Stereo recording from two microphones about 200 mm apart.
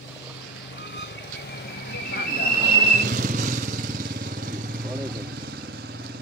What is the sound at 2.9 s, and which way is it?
Vehicle, 40° right (ahead or behind).